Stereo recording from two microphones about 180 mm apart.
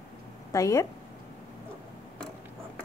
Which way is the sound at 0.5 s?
15° left (ahead or behind).